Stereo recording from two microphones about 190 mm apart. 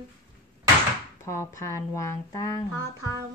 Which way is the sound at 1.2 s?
15° left (ahead or behind).